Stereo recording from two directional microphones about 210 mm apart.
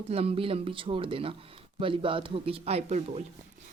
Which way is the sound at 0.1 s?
30° right (ahead or behind).